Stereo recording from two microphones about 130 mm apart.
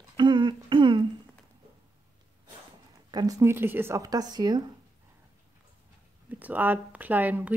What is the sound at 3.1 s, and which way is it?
A woman's voice, 25° right (ahead or behind).